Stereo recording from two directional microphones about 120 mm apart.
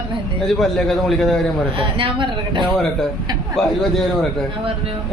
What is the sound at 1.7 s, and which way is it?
Speech, 45° right (ahead or behind).